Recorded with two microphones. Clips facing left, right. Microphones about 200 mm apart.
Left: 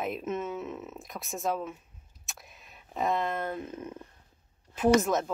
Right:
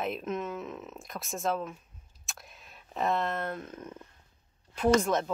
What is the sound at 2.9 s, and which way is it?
Speech, centre (ahead or behind).